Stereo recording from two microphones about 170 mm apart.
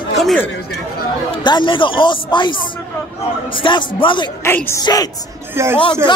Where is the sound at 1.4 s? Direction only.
25° left (ahead or behind).